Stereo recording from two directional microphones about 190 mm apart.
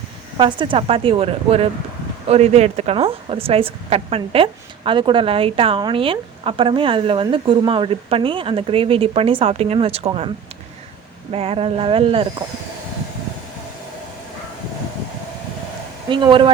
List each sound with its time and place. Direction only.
0.3 s a woman's voice: 25° right (ahead or behind)
11.3 s a woman's voice: 30° right (ahead or behind)
16.0 s a woman's voice: 25° right (ahead or behind)